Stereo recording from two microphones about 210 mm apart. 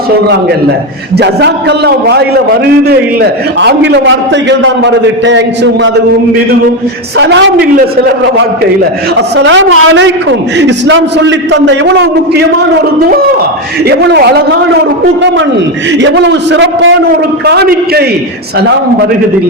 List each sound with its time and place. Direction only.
1.1 s a man's voice: 55° right (ahead or behind)
7.2 s a man's voice: 55° right (ahead or behind)
13.8 s a man's voice: 50° right (ahead or behind)
16.0 s a man's voice: 55° right (ahead or behind)